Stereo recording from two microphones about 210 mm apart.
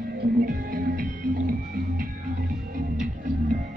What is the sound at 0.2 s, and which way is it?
Music, 45° right (ahead or behind).